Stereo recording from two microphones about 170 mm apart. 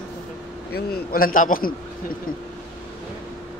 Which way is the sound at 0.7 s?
65° left (ahead or behind).